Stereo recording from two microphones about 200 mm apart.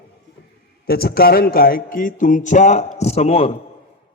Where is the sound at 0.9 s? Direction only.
50° left (ahead or behind); by 3.6 s 30° left (ahead or behind).